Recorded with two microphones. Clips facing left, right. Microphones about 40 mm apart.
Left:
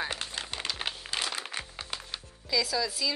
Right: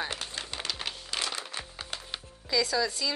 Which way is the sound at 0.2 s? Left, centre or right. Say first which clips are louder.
Left 1 dB; left.